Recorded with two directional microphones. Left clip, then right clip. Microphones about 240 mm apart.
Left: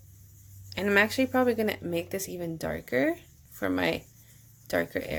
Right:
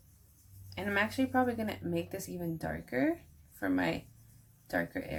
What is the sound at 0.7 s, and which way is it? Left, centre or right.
Speech, left.